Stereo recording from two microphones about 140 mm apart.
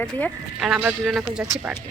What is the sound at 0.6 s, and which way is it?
Speech, 5° right (ahead or behind).